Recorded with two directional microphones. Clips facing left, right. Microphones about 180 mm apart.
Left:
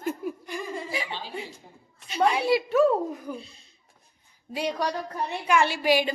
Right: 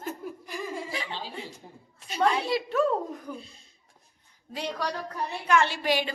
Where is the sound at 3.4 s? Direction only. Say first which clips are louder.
Left 2 dB; 45° right (ahead or behind).